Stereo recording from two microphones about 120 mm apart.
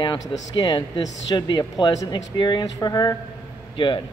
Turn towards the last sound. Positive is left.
turn(degrees=45)  # may be behind; listen again after turning